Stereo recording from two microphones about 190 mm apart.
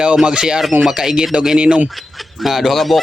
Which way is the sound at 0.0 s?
5° right (ahead or behind).